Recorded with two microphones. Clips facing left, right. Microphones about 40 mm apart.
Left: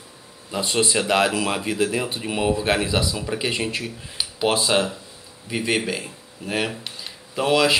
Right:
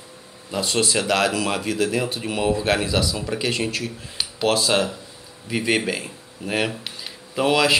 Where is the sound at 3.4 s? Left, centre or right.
Centre.